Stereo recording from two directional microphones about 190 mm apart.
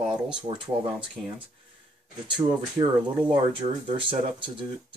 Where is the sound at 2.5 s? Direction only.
25° right (ahead or behind).